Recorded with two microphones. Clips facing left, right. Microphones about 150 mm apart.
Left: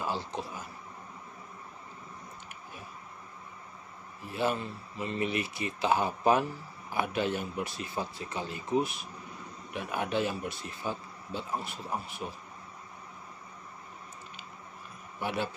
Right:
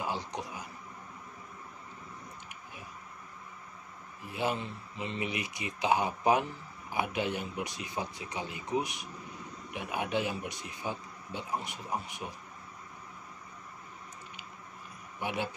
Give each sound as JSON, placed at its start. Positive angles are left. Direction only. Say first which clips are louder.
{"t": 0.0, "sound": "speech", "louder": "left 1 dB", "side_deg": -15}
{"t": 4.3, "sound": "speech", "louder": "left 2 dB", "side_deg": -15}
{"t": 15.2, "sound": "speech", "louder": "left 2 dB", "side_deg": -15}